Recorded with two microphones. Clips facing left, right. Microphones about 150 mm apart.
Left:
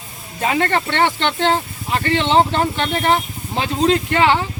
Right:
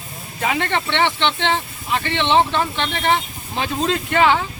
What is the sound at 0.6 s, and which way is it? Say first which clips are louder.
Speech: left 3 dB; 45° left (ahead or behind).